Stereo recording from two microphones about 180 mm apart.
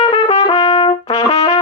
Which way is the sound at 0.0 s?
35° left (ahead or behind).